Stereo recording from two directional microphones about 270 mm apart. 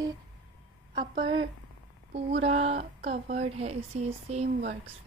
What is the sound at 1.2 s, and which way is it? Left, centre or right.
Speech, centre.